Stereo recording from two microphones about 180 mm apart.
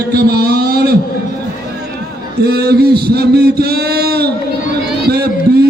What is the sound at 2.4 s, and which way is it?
A man's voice, 60° right (ahead or behind).